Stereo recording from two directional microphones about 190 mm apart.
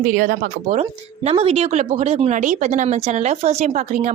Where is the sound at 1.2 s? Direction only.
30° right (ahead or behind).